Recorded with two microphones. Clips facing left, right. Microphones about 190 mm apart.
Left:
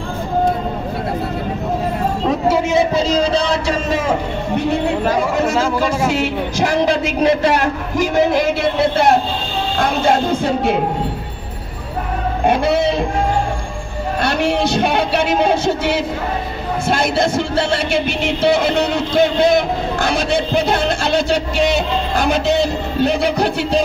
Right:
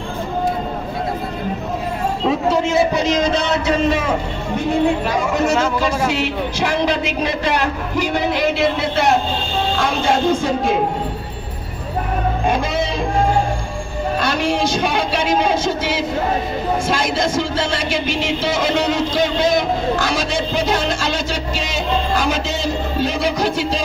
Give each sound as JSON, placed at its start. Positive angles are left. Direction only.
{"t": 2.7, "sound": "speech", "side_deg": 25}
{"t": 5.0, "sound": "a man's voice", "side_deg": 30}
{"t": 14.2, "sound": "a man's voice", "side_deg": 65}
{"t": 18.0, "sound": "a man's voice", "side_deg": 60}